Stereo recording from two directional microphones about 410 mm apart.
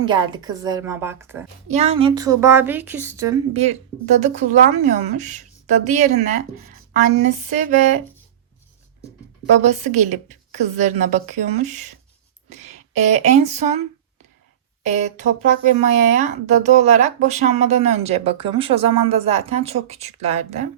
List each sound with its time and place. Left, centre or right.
0.0 s speech: centre
7.3 s speech: centre
9.6 s speech: centre
15.0 s speech: centre